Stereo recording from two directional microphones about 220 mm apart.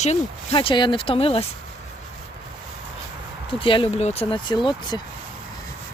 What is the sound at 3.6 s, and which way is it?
Speech, 25° left (ahead or behind).